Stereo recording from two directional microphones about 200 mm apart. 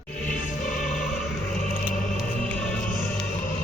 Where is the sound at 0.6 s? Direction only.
40° left (ahead or behind).